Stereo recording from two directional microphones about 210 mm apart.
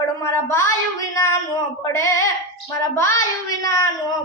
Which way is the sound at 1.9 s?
15° left (ahead or behind).